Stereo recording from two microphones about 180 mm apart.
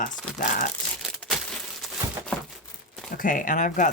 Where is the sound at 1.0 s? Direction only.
Centre (ahead or behind).